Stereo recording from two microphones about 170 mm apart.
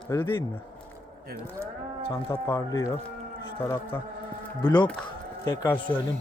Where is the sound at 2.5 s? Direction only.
20° left (ahead or behind).